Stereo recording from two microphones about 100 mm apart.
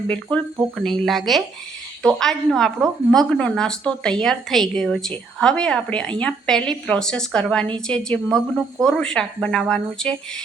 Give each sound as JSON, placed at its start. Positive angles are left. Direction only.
{"t": 0.1, "sound": "a woman's voice", "side_deg": 10}